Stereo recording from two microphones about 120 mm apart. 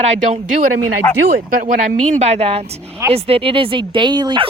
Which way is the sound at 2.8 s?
20° right (ahead or behind).